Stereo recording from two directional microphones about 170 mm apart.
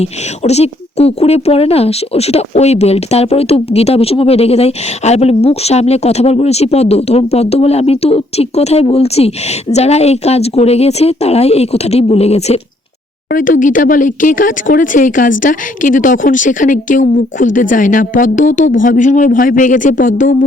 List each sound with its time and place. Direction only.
0.0 s speech: 40° left (ahead or behind)
13.3 s speech: 50° left (ahead or behind)